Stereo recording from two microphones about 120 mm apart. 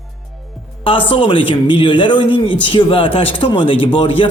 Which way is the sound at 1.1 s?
45° left (ahead or behind).